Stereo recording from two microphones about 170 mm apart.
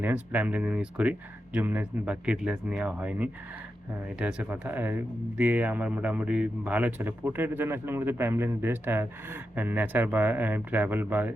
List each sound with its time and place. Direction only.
0.0 s speech: 10° right (ahead or behind)